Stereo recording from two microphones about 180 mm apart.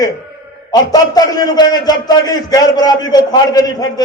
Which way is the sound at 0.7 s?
20° left (ahead or behind).